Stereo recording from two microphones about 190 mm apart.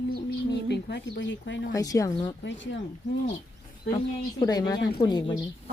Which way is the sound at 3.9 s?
20° left (ahead or behind).